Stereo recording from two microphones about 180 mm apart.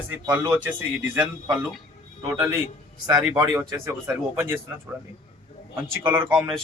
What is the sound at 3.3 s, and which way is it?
A man's voice, 20° right (ahead or behind).